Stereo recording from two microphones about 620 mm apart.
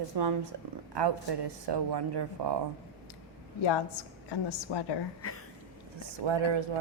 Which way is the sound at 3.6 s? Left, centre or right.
Left.